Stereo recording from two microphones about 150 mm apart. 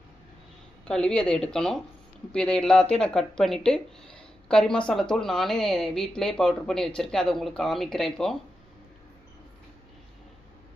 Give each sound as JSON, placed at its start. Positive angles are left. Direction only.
{"t": 0.9, "sound": "a woman's voice", "side_deg": 5}